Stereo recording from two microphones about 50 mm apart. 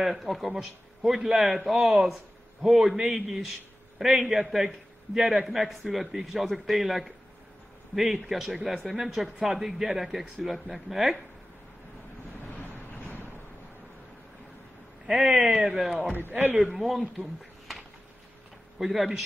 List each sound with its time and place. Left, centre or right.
0.0 s a man's voice: centre
12.7 s boat: left
15.0 s speech: centre
16.3 s a man's voice: right
16.6 s a man's voice: centre
18.8 s a man's voice: centre